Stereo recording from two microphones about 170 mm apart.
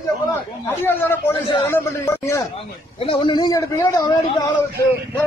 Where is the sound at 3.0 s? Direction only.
30° left (ahead or behind).